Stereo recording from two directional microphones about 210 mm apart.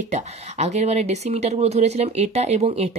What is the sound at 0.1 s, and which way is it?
Speech, 30° right (ahead or behind).